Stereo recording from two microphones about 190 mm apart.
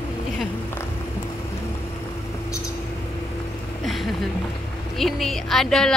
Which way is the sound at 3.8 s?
Centre (ahead or behind).